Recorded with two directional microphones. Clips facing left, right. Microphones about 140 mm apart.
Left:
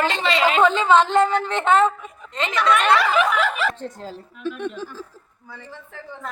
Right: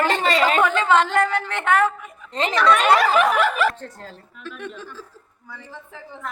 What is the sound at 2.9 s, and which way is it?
Snicker, 45° right (ahead or behind).